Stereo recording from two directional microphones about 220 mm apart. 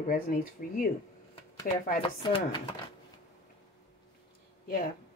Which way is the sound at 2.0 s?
20° left (ahead or behind).